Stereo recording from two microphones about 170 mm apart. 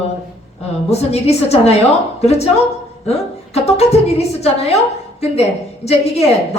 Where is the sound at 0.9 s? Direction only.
40° left (ahead or behind).